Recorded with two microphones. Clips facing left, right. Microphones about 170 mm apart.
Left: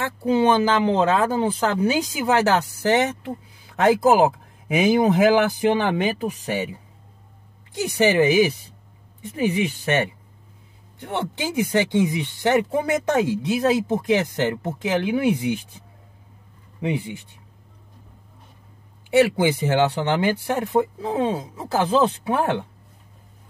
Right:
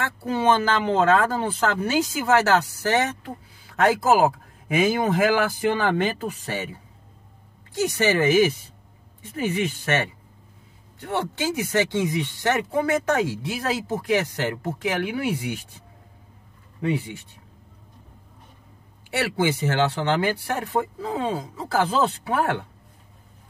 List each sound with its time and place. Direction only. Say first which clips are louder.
0.0 s speech: left 4 dB; 15° left (ahead or behind)
7.9 s speech: left 3 dB; 15° left (ahead or behind)
11.4 s speech: left 3 dB; 15° left (ahead or behind)
16.8 s speech: even; 15° left (ahead or behind)
19.0 s speech: left 6 dB; 15° left (ahead or behind)